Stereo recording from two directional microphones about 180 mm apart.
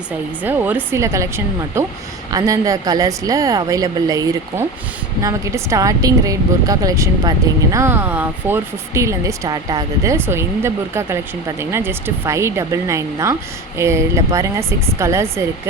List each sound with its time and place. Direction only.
0.4 s a woman's voice: 10° right (ahead or behind)
2.3 s a woman's voice: 20° right (ahead or behind)